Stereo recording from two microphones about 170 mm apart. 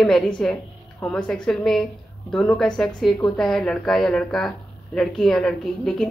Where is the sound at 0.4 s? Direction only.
5° left (ahead or behind).